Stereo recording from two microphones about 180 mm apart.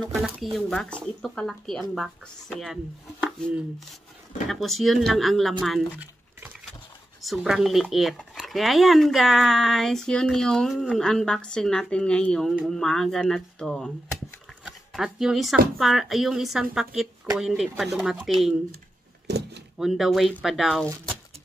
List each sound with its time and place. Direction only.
0.4 s speech: centre (ahead or behind)
5.9 s dishes: 10° right (ahead or behind)
7.2 s speech: centre (ahead or behind)
19.3 s door: 70° right (ahead or behind)
19.8 s speech: centre (ahead or behind)